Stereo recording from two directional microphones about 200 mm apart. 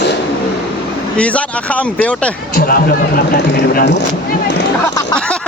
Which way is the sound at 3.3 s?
60° left (ahead or behind).